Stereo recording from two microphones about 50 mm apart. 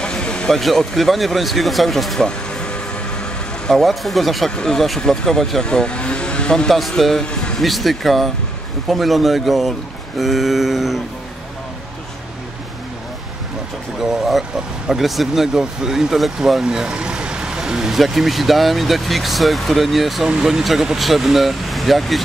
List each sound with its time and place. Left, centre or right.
0.0 s a sound: centre
0.5 s speech: centre
2.1 s vehicle: centre
3.7 s speech: centre
4.6 s speech: centre
5.7 s vehicle: centre
6.7 s speech: centre
13.9 s speech: centre
16.6 s speech: centre
20.2 s speech: centre